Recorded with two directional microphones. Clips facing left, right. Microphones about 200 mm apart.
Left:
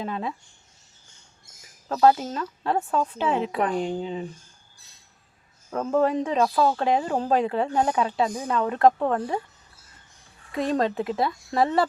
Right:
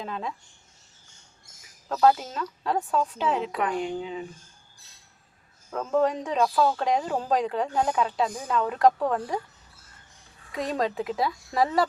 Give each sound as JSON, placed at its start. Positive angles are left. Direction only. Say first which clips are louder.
{"t": 0.0, "sound": "speech", "louder": "left 3 dB", "side_deg": 5}
{"t": 1.9, "sound": "speech", "louder": "left 2 dB", "side_deg": 0}
{"t": 3.6, "sound": "speech", "louder": "left 3 dB", "side_deg": 35}
{"t": 5.7, "sound": "speech", "louder": "left 2 dB", "side_deg": 5}
{"t": 10.5, "sound": "speech", "louder": "left 4 dB", "side_deg": 0}